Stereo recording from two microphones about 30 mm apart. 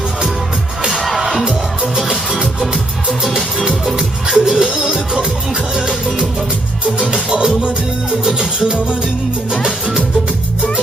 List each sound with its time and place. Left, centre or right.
3.9 s music: right
7.1 s music: right